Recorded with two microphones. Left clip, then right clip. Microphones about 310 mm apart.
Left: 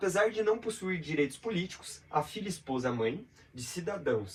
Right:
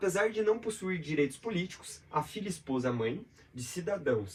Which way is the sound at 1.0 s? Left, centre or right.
Centre.